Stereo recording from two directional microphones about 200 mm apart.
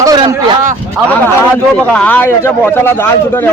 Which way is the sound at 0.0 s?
15° right (ahead or behind).